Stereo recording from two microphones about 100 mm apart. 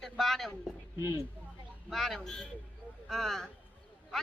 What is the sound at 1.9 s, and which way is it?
Speech, 5° left (ahead or behind).